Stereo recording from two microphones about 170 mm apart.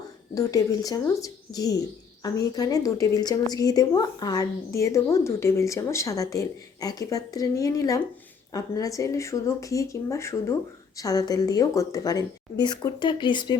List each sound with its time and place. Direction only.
0.3 s a woman's voice: 20° left (ahead or behind)